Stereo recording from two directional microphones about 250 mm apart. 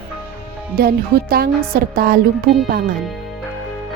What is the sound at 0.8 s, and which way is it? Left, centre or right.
Speech, right.